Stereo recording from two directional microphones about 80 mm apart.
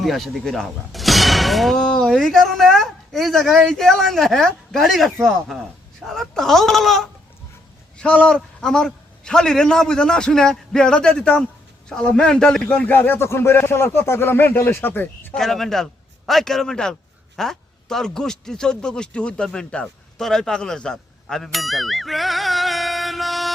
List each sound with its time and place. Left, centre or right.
0.0 s a man's voice: centre
12.6 s speech: centre
15.4 s a man's voice: centre